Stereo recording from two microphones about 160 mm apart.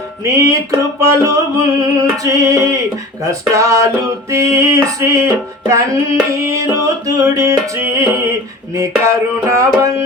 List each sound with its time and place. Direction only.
0.3 s music: 20° right (ahead or behind)